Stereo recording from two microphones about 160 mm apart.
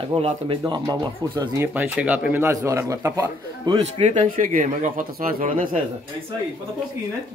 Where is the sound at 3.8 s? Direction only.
45° right (ahead or behind).